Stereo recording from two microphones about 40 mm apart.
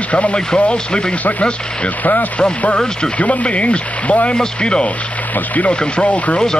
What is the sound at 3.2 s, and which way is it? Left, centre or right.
Speech, left.